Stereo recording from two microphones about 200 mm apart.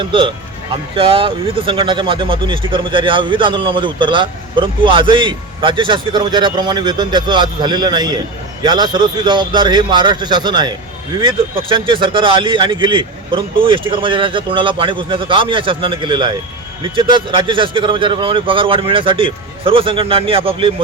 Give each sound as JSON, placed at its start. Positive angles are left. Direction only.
{"t": 0.0, "sound": "speech", "side_deg": -25}